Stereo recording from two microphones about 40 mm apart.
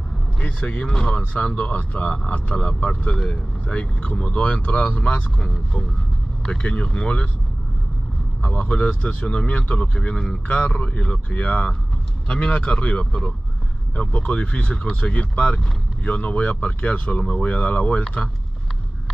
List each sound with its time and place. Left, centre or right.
0.4 s speech: left
8.5 s speech: left
9.9 s speech: left
10.8 s speech: left